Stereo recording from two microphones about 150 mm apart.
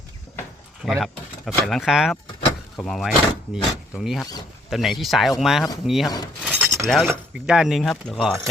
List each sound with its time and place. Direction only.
0.9 s speech: centre (ahead or behind)
6.4 s a sound: 5° right (ahead or behind)
6.8 s speech: 5° left (ahead or behind)